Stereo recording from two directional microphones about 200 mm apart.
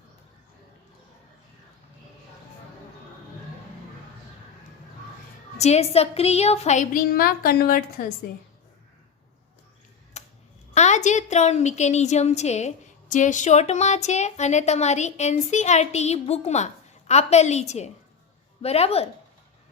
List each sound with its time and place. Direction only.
5.5 s a woman's voice: 35° left (ahead or behind)
10.2 s a sound: 35° left (ahead or behind)
10.8 s a woman's voice: 35° left (ahead or behind)